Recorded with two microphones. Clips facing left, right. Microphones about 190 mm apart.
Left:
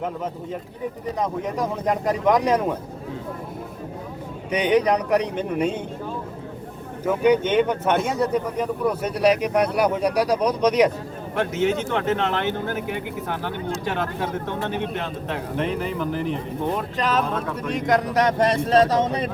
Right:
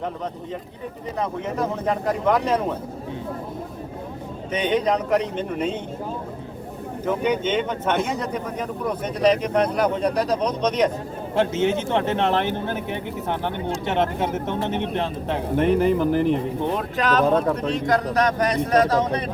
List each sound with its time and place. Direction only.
2.2 s speech: 15° left (ahead or behind)
4.5 s speech: 10° left (ahead or behind)
7.0 s speech: 10° left (ahead or behind)
11.3 s speech: 25° right (ahead or behind)
15.5 s speech: 45° right (ahead or behind)
17.0 s speech: centre (ahead or behind)
17.2 s speech: 35° right (ahead or behind)
17.7 s speech: 20° left (ahead or behind)